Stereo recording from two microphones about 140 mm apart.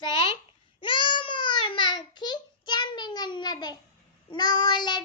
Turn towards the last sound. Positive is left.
turn(degrees=30)  # may be behind; listen again after turning